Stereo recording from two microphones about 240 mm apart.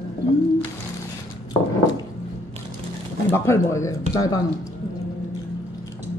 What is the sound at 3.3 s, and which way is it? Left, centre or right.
A woman's voice, centre.